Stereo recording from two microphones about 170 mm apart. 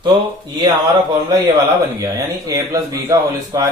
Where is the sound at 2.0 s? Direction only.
15° right (ahead or behind).